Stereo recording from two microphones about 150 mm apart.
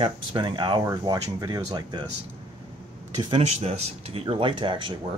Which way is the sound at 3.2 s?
40° right (ahead or behind).